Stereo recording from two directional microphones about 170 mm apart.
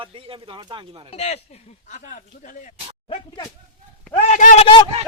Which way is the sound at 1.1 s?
40° left (ahead or behind).